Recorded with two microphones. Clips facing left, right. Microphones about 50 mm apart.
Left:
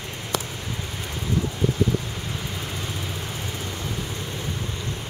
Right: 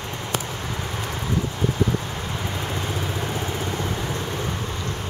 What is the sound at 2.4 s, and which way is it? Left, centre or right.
Vehicle, right.